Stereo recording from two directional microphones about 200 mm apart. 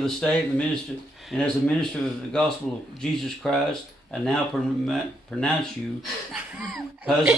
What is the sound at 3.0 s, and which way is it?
Speech, centre (ahead or behind).